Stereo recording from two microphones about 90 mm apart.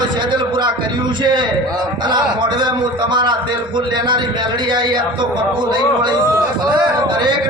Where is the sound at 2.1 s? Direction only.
60° right (ahead or behind).